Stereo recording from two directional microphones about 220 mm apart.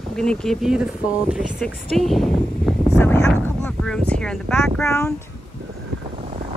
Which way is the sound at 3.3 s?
5° left (ahead or behind).